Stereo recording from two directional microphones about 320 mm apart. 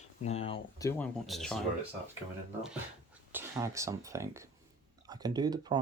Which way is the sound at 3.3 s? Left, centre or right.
Centre.